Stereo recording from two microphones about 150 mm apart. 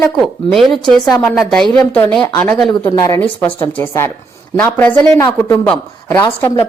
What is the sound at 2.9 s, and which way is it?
A woman's voice, 20° left (ahead or behind).